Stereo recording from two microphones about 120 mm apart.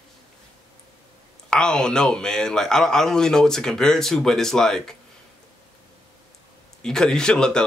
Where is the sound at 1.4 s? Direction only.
5° left (ahead or behind).